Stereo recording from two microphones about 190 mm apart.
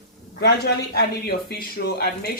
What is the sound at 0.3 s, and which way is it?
Speech, 60° left (ahead or behind).